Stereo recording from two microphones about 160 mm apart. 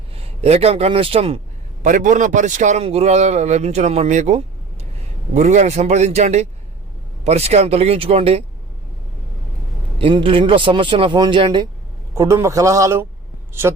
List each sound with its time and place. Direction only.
0.2 s a man's voice: 40° right (ahead or behind)
1.8 s a man's voice: 55° right (ahead or behind)
10.0 s a man's voice: 35° right (ahead or behind)
12.1 s a man's voice: 20° right (ahead or behind)